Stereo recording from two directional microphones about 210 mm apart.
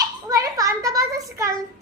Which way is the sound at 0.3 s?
15° right (ahead or behind).